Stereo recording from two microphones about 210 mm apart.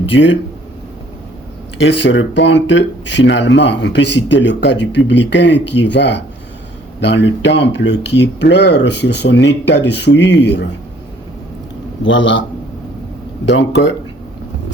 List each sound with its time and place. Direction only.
0.1 s speech: 60° left (ahead or behind)
1.8 s speech: 60° left (ahead or behind)
12.0 s speech: 60° left (ahead or behind)